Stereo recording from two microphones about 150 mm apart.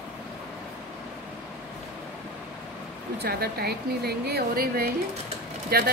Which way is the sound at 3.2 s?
90° right.